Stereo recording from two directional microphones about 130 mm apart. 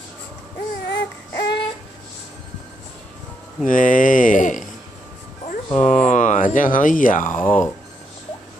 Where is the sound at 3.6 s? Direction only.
90° left.